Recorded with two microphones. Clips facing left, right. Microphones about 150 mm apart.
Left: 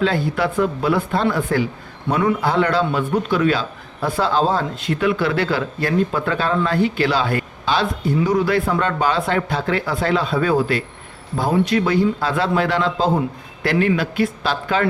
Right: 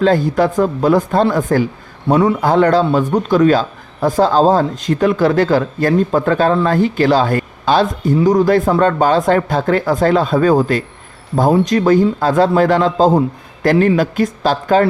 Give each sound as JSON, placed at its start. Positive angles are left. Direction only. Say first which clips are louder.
{"t": 0.0, "sound": "a man's voice", "louder": "right 6 dB", "side_deg": -45}